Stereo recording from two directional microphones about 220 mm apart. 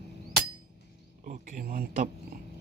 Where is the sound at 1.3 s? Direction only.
40° right (ahead or behind).